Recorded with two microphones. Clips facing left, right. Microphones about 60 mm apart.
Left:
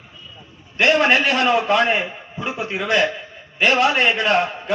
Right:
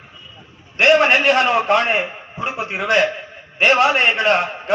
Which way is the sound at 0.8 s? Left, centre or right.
Right.